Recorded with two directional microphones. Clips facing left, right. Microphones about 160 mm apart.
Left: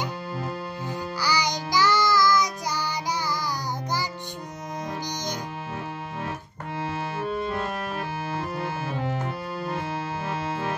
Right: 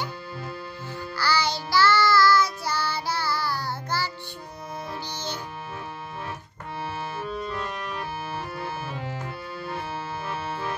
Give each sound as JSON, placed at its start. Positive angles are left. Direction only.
{"t": 1.1, "sound": "music", "side_deg": 15}
{"t": 7.2, "sound": "music", "side_deg": 50}